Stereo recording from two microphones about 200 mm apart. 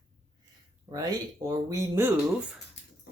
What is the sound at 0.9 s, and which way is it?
Speech, 15° right (ahead or behind).